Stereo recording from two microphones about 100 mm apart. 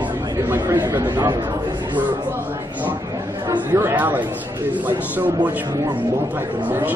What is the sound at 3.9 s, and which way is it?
A man's voice, 20° right (ahead or behind).